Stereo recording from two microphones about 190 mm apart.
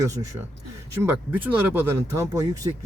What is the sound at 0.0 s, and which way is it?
Speech, 15° right (ahead or behind).